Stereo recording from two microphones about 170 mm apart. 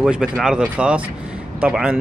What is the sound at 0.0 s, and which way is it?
Speech, 5° right (ahead or behind).